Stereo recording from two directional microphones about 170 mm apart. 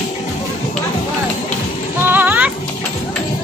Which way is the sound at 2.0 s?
10° right (ahead or behind).